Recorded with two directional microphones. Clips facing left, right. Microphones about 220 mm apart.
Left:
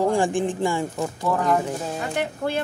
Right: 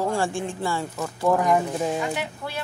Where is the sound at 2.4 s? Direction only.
50° left (ahead or behind).